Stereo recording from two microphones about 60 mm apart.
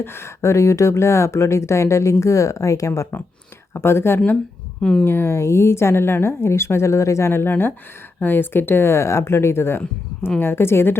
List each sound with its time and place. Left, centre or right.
0.0 s speech: left
3.8 s speech: left
4.8 s speech: centre
5.0 s speech: left